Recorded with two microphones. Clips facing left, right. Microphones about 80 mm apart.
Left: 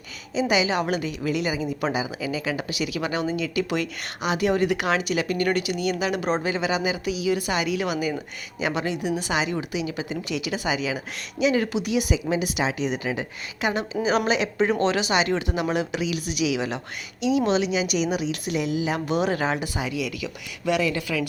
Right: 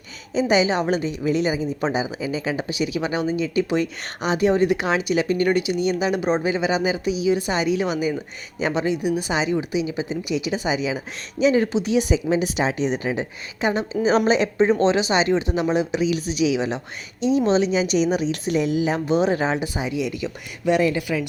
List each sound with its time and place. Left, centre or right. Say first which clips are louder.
0.3 s speech: right 3 dB; right
18.9 s speech: right 4 dB; right